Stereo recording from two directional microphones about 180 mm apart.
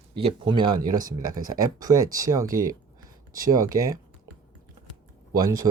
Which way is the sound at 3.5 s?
20° right (ahead or behind).